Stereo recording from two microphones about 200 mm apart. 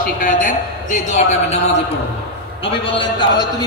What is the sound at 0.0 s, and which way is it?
A man's voice, 40° left (ahead or behind).